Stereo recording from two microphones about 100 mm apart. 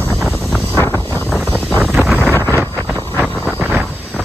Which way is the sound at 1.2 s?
5° right (ahead or behind).